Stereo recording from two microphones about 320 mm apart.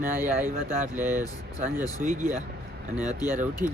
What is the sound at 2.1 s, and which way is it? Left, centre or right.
Speech, centre.